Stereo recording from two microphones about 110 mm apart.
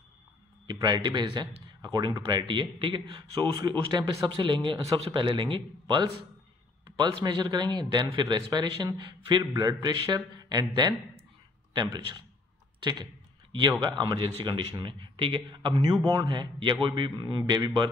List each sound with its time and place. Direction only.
0.7 s speech: 40° right (ahead or behind)
1.8 s a sound: 45° right (ahead or behind)
2.1 s speech: 40° right (ahead or behind)
9.4 s speech: 30° right (ahead or behind)